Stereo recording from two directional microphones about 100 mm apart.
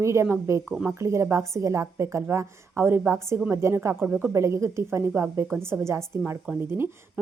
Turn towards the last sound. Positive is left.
turn(degrees=-25)  # may be behind; listen again after turning